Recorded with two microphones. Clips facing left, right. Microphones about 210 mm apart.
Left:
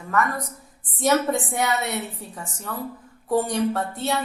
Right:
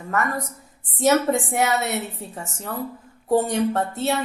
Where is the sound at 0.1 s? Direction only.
25° right (ahead or behind).